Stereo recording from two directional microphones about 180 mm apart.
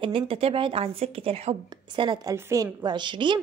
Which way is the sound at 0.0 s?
30° right (ahead or behind).